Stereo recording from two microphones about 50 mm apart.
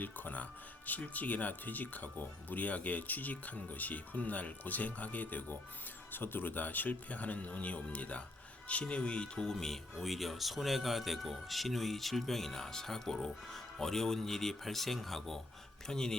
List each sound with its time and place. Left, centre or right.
0.0 s speech: left; by 16.1 s centre